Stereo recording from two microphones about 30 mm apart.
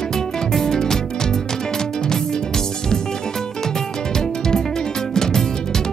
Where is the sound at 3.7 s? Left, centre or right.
Centre.